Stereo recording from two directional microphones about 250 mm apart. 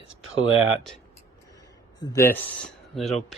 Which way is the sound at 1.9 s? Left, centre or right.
Centre.